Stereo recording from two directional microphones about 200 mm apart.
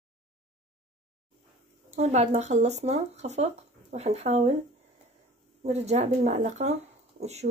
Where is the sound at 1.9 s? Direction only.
35° right (ahead or behind).